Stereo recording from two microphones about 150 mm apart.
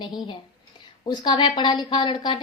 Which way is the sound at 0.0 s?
30° left (ahead or behind).